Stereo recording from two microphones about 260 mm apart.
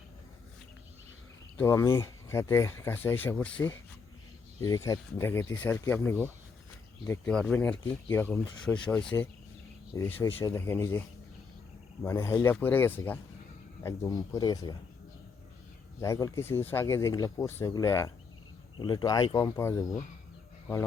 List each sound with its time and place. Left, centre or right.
1.5 s speech: centre
4.9 s speech: centre
9.0 s speech: centre
12.0 s speech: centre
16.0 s speech: centre